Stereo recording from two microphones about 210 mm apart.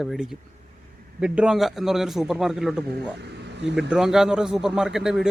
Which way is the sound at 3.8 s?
Centre (ahead or behind).